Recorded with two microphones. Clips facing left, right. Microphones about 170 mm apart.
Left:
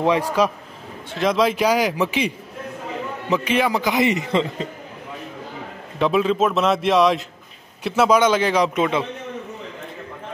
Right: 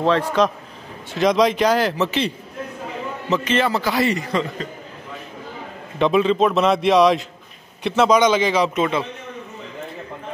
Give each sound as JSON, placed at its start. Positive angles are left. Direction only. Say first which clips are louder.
{"t": 0.0, "sound": "a man's voice", "louder": "right 1 dB", "side_deg": 10}
{"t": 5.9, "sound": "a man's voice", "louder": "right 2 dB", "side_deg": 5}